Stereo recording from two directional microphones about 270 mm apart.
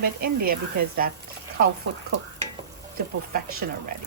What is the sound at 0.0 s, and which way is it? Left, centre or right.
Speech, right.